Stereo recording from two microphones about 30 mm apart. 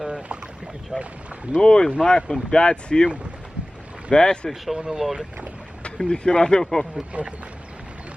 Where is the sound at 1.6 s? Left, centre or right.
Left.